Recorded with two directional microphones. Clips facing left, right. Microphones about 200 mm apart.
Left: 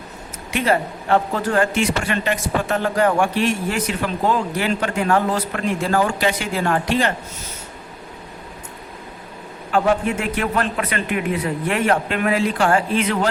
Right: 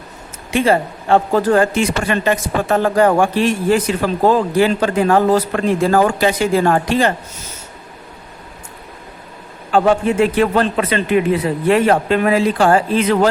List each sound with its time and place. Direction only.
0.5 s speech: 30° right (ahead or behind)
9.7 s speech: 30° right (ahead or behind)